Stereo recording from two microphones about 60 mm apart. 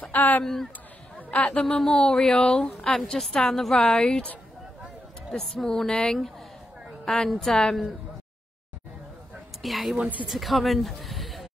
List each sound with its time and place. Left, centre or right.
0.0 s speech: left
1.1 s a sound: left
1.6 s a woman's voice: centre
3.0 s speech: centre
4.0 s a woman's voice: centre
5.3 s a woman's voice: centre
9.6 s speech: centre
9.9 s speech: right
10.2 s speech: centre